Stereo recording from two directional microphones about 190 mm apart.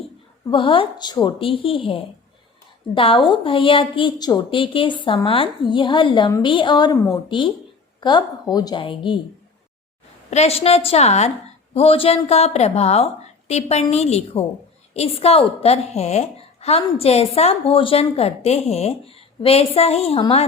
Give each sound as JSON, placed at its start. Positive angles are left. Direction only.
{"t": 0.5, "sound": "a woman's voice", "side_deg": 25}
{"t": 6.9, "sound": "speech", "side_deg": 10}
{"t": 7.3, "sound": "a woman's voice", "side_deg": 25}
{"t": 10.2, "sound": "a woman's voice", "side_deg": 35}